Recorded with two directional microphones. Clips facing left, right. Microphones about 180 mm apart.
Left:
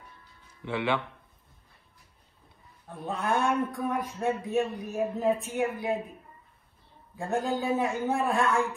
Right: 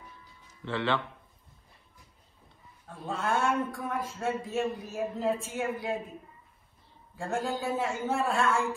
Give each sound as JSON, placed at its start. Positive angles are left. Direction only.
{"t": 0.7, "sound": "a man's voice", "side_deg": 15}
{"t": 2.9, "sound": "a man's voice", "side_deg": 20}
{"t": 7.2, "sound": "a man's voice", "side_deg": 20}